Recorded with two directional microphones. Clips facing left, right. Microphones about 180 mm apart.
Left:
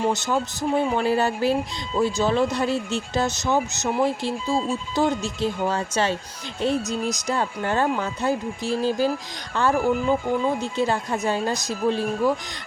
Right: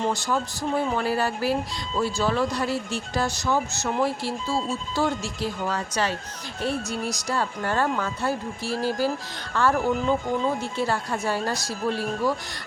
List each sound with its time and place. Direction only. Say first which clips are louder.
0.1 s speech: left 2 dB; 20° left (ahead or behind)